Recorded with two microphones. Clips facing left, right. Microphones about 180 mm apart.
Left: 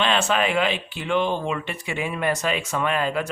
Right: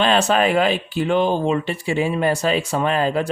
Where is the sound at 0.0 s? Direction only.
40° right (ahead or behind).